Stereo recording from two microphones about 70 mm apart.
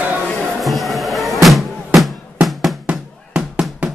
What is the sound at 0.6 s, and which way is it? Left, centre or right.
Music, centre.